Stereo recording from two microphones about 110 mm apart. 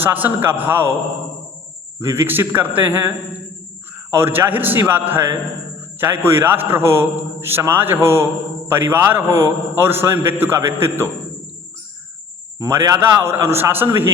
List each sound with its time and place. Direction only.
0.0 s a man's voice: 15° right (ahead or behind)
2.0 s a man's voice: 25° right (ahead or behind)
13.0 s a man's voice: 20° right (ahead or behind)